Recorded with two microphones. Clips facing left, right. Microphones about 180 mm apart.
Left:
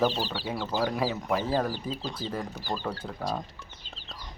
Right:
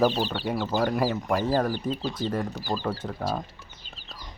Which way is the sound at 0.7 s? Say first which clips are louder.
Right 3 dB; centre (ahead or behind).